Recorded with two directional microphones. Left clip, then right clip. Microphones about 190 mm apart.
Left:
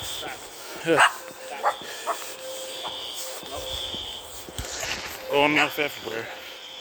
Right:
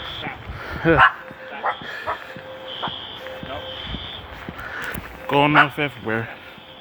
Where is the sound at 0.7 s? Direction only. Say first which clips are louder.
Right 6 dB; 25° left (ahead or behind).